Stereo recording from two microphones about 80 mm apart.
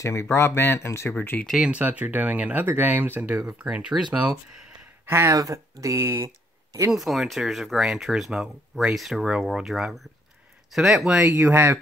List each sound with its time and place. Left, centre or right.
0.0 s speech: left
1.1 s speech: left
1.6 s speech: centre
5.0 s speech: right
6.9 s speech: centre
11.1 s speech: right